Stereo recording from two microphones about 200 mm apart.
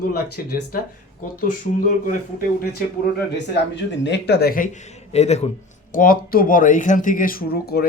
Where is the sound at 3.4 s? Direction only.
60° left (ahead or behind); by 5.5 s 35° left (ahead or behind).